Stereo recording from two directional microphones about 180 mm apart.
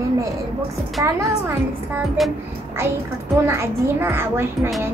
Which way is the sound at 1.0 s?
15° right (ahead or behind).